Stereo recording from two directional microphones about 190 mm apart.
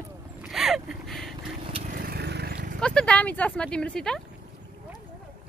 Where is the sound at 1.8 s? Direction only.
50° right (ahead or behind).